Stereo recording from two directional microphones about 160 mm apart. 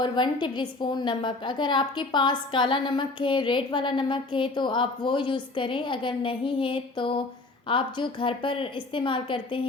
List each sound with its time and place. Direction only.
0.0 s a woman's voice: 30° left (ahead or behind)